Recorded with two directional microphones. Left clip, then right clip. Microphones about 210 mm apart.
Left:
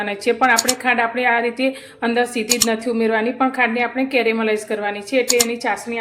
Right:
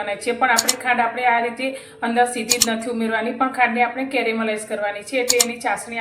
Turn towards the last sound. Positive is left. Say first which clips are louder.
# left 2 dB
turn(degrees=40)  # may be behind; listen again after turning